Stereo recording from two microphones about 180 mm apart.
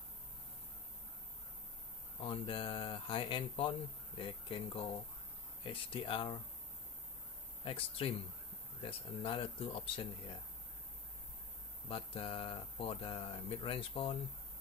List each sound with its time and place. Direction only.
2.2 s speech: 30° left (ahead or behind)
7.6 s speech: 30° left (ahead or behind)
11.9 s speech: 30° left (ahead or behind)